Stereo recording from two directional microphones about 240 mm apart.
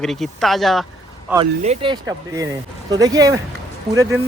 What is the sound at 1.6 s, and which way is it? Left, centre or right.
Speech, right.